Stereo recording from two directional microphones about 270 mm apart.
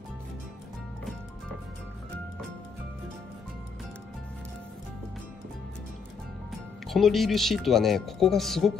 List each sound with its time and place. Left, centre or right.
6.9 s speech: centre